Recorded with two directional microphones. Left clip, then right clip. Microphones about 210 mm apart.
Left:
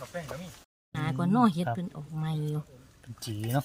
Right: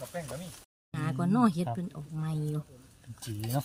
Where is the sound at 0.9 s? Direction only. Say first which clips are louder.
Left 3 dB; 20° left (ahead or behind).